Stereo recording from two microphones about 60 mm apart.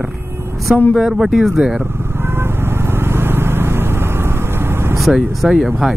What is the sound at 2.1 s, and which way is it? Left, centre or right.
Vehicle, right.